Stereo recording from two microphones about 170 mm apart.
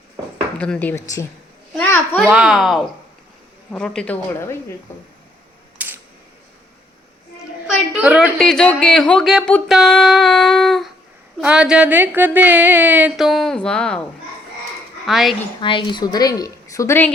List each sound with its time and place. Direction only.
0.6 s a woman's voice: 10° left (ahead or behind)
2.3 s child singing: 5° right (ahead or behind)
3.7 s a woman's voice: 5° left (ahead or behind)
5.8 s camera: 10° right (ahead or behind)
7.9 s speech: 5° right (ahead or behind)
8.4 s child singing: 5° left (ahead or behind)
11.3 s speech: 5° right (ahead or behind)
15.0 s child singing: centre (ahead or behind)
15.6 s a woman's voice: 30° left (ahead or behind)